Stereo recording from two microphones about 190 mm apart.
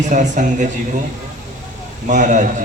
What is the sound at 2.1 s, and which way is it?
Speech, 40° right (ahead or behind).